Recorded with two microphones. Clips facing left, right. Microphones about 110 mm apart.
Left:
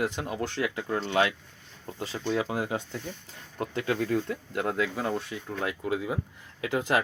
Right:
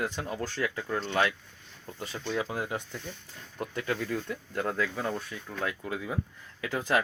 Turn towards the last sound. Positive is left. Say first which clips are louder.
# left 2 dB
turn(degrees=20)  # may be behind; listen again after turning